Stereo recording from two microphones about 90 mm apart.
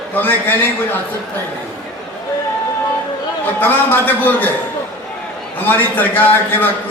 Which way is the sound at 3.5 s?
20° left (ahead or behind).